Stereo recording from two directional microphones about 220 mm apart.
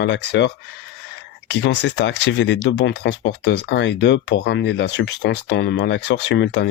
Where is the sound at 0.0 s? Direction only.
50° left (ahead or behind).